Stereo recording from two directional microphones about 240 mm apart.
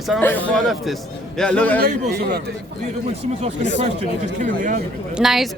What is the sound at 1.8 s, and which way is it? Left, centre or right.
Speech, right.